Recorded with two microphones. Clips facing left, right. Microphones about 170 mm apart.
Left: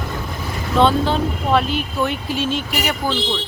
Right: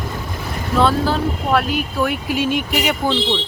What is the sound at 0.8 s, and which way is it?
Speech, 5° right (ahead or behind).